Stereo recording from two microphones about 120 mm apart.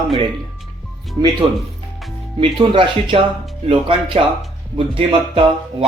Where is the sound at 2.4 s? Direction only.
45° right (ahead or behind).